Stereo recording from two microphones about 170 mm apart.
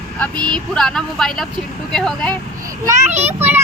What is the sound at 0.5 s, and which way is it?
Speech, 5° left (ahead or behind).